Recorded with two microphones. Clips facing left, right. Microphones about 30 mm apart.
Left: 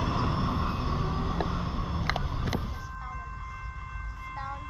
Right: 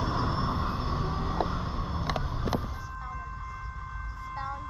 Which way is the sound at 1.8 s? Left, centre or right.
Left.